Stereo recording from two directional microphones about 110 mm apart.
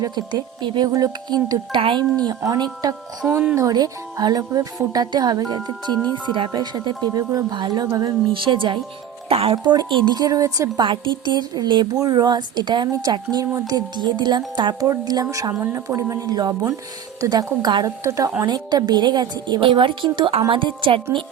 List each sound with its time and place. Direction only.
0.0 s a woman's voice: 35° right (ahead or behind)
1.8 s a woman's voice: 50° right (ahead or behind)
2.4 s a woman's voice: 35° right (ahead or behind)
3.2 s speech: 15° right (ahead or behind)
3.5 s a woman's voice: 35° right (ahead or behind)
8.3 s a woman's voice: 50° right (ahead or behind)
9.3 s speech: 60° right (ahead or behind)
9.6 s a woman's voice: 45° right (ahead or behind)
10.8 s a woman's voice: 45° right (ahead or behind)
18.0 s a woman's voice: 30° right (ahead or behind); by 21.2 s 50° right (ahead or behind)